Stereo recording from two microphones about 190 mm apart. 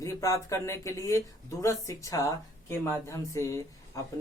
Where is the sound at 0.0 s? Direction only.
15° left (ahead or behind).